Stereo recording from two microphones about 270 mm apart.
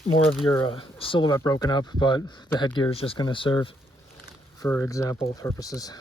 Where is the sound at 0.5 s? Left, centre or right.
Centre.